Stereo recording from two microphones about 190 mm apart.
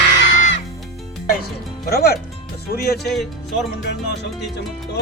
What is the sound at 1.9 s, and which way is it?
Speech, 55° left (ahead or behind).